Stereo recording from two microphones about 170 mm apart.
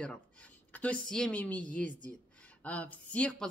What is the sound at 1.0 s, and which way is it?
A woman's voice, 5° left (ahead or behind).